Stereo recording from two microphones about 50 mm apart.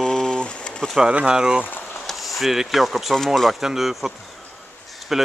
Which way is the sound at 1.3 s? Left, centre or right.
Centre.